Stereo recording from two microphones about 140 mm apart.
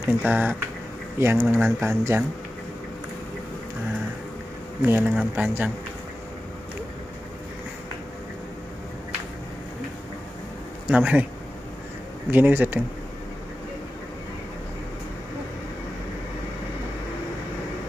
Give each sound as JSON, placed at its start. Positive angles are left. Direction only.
{"t": 0.0, "sound": "speech", "side_deg": -15}
{"t": 4.8, "sound": "speech", "side_deg": -15}
{"t": 10.9, "sound": "speech", "side_deg": -10}
{"t": 12.3, "sound": "speech", "side_deg": -15}